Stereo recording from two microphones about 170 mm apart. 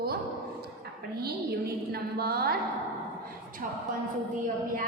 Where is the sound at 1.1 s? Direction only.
65° right (ahead or behind).